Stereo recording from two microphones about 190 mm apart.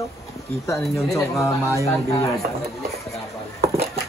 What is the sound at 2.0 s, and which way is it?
Speech, 20° left (ahead or behind).